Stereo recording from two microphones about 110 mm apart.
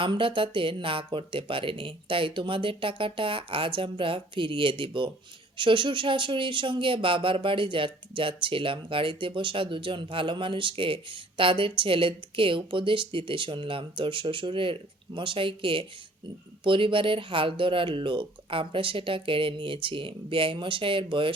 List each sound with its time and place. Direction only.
0.0 s speech: 50° right (ahead or behind)